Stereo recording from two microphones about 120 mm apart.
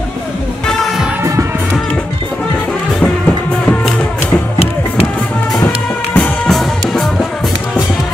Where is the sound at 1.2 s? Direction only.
25° right (ahead or behind).